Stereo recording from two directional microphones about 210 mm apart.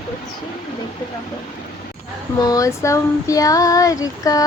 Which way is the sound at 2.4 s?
15° left (ahead or behind).